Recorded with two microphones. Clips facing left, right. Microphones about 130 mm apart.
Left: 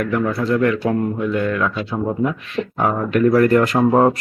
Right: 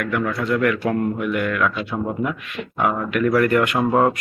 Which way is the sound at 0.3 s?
30° left (ahead or behind).